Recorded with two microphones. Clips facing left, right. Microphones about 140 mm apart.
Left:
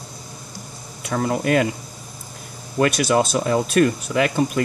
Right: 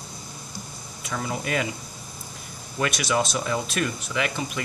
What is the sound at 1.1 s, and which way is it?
Speech, 50° left (ahead or behind).